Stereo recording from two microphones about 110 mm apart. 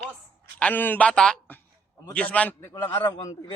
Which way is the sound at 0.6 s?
15° left (ahead or behind).